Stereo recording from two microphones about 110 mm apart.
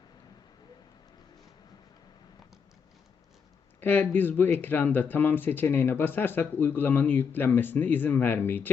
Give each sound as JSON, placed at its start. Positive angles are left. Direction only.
{"t": 3.8, "sound": "speech", "side_deg": 15}